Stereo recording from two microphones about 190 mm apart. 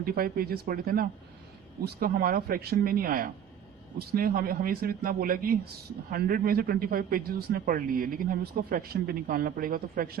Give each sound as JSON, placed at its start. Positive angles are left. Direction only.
{"t": 0.0, "sound": "a man's voice", "side_deg": -50}